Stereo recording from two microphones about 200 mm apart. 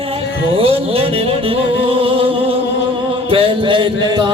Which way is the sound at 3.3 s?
25° right (ahead or behind).